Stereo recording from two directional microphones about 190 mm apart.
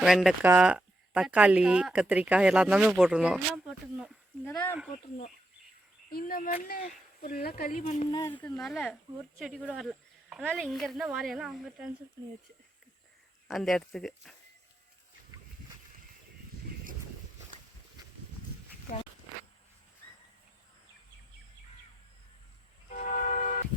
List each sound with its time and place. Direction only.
0.0 s speech: centre (ahead or behind)
4.4 s speech: 10° left (ahead or behind)
6.1 s speech: 50° left (ahead or behind)
8.1 s speech: 15° left (ahead or behind); by 12.0 s 5° right (ahead or behind)
13.5 s speech: centre (ahead or behind)
22.9 s vehicle: 45° left (ahead or behind)